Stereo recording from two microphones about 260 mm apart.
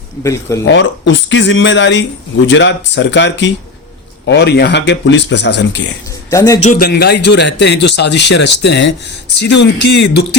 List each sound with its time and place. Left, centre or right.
0.2 s speech: centre
0.7 s speech: left
6.3 s speech: centre
6.6 s a man's voice: left